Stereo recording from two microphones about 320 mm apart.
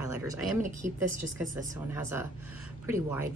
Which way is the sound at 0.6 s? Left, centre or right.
Right.